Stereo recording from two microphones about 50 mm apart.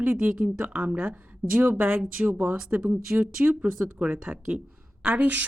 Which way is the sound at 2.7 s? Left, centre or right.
Right.